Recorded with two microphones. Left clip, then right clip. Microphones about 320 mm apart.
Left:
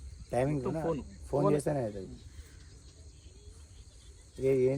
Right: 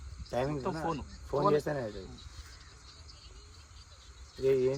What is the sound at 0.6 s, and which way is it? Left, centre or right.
Speech, centre.